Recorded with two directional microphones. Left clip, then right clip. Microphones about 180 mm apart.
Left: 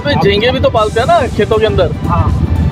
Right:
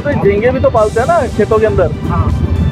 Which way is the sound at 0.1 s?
20° left (ahead or behind).